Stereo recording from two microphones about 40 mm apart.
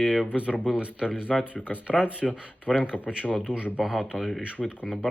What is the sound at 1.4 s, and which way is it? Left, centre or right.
Speech, left.